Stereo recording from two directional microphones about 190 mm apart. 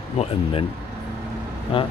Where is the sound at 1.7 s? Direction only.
30° left (ahead or behind).